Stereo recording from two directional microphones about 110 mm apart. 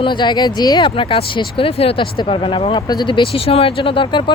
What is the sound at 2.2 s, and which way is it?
Speech, 50° left (ahead or behind).